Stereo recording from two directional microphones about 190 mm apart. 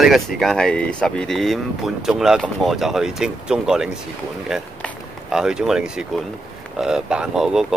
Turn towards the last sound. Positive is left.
turn(degrees=0)  # may be behind; listen again after turning